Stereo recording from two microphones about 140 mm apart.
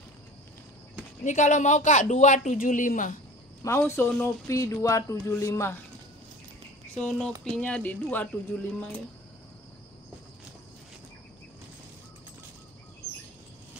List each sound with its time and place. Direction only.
1.2 s speech: 60° left (ahead or behind)
3.6 s speech: 20° left (ahead or behind)
7.0 s speech: 5° left (ahead or behind)